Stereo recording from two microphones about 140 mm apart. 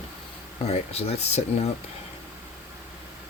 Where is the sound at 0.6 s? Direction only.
50° left (ahead or behind).